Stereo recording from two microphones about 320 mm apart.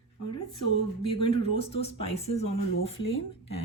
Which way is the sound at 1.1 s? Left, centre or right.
Centre.